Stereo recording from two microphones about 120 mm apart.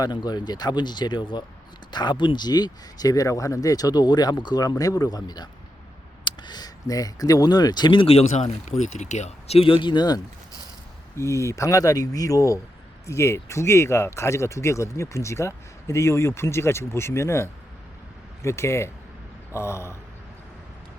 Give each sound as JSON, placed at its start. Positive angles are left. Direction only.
{"t": 0.0, "sound": "speech", "side_deg": 35}
{"t": 8.7, "sound": "speech", "side_deg": 75}
{"t": 11.1, "sound": "speech", "side_deg": 25}